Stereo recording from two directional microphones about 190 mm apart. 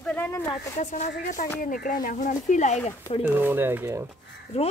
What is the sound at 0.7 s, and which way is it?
Speech, 40° left (ahead or behind).